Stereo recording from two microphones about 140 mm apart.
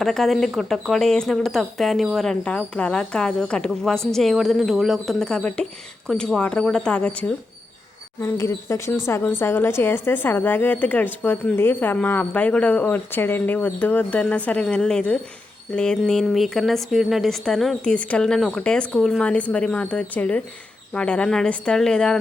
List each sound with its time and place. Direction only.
0.0 s speech: centre (ahead or behind)
8.2 s a woman's voice: 20° left (ahead or behind); by 22.2 s 5° left (ahead or behind)